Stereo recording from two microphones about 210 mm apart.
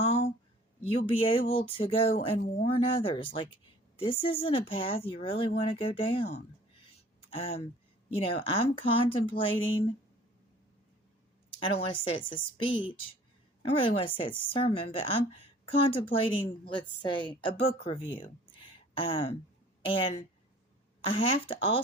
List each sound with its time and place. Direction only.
0.0 s a sound: 30° left (ahead or behind)
0.9 s speech: 25° left (ahead or behind)
11.6 s speech: 25° left (ahead or behind)